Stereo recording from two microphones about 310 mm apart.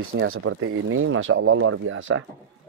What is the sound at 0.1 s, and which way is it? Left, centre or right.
Speech, right.